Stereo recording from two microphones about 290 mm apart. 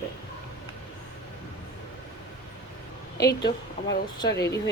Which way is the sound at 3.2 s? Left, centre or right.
Left.